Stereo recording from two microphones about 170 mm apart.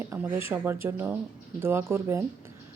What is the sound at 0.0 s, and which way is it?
Speech, 15° right (ahead or behind).